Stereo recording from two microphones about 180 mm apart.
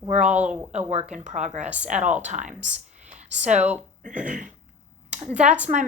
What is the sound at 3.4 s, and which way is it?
A woman's voice, 40° right (ahead or behind).